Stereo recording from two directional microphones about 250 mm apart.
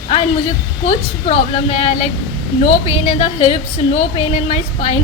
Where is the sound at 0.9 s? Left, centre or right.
Left.